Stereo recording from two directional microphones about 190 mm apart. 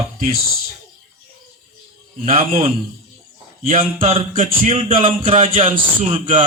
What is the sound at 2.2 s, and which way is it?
A man's voice, 30° right (ahead or behind).